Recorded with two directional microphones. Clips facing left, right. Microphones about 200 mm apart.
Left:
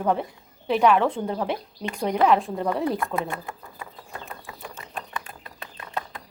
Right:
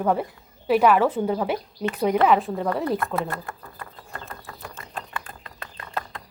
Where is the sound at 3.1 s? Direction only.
10° left (ahead or behind).